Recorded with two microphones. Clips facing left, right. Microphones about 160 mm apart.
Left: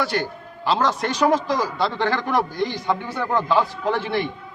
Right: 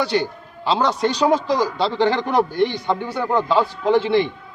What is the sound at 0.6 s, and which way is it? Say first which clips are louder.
A man's voice: right 2 dB; 20° right (ahead or behind).